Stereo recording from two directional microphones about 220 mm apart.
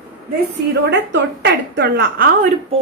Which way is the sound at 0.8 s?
50° right (ahead or behind).